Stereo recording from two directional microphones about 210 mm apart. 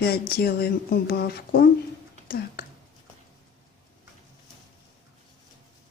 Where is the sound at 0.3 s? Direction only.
50° left (ahead or behind).